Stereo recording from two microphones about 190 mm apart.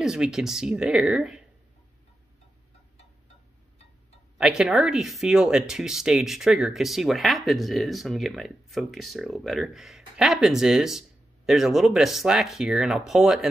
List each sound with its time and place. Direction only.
0.0 s speech: centre (ahead or behind)
4.4 s speech: 5° right (ahead or behind)